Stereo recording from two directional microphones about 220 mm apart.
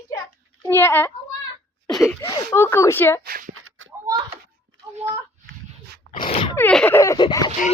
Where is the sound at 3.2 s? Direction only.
40° right (ahead or behind).